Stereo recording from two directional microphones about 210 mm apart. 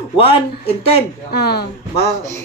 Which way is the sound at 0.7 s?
30° left (ahead or behind).